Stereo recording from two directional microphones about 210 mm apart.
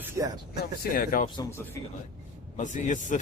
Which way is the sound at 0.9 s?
45° left (ahead or behind).